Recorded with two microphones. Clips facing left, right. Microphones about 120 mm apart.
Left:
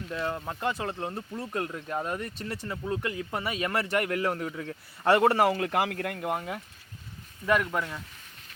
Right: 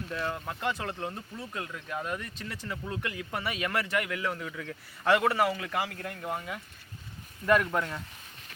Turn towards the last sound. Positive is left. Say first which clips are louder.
# right 1 dB
turn(degrees=0)  # may be behind; listen again after turning